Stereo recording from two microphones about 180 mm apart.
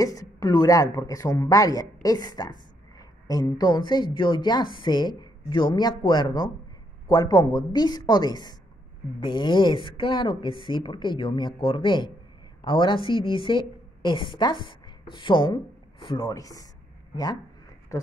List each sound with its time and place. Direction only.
0.0 s a woman's voice: 20° left (ahead or behind)